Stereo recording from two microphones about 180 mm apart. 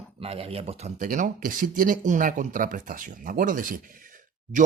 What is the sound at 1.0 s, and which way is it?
Speech, 50° right (ahead or behind).